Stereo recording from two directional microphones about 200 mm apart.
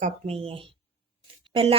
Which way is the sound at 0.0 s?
30° right (ahead or behind).